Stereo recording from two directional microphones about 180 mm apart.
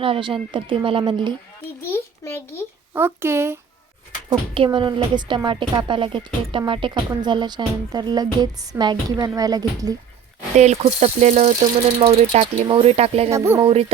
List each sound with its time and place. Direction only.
0.0 s a woman's voice: 30° right (ahead or behind)
1.9 s a child's voice: 15° left (ahead or behind)
2.9 s speech: 10° right (ahead or behind)
4.3 s a woman's voice: 30° right (ahead or behind)
10.6 s speech: 40° right (ahead or behind)
13.3 s speech: 15° right (ahead or behind)
13.6 s speech: 30° right (ahead or behind)